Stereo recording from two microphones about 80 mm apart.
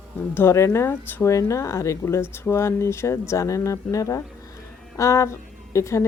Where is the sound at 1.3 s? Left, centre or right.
Left.